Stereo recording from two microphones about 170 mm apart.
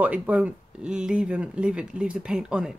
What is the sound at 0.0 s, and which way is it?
Speech, 10° right (ahead or behind).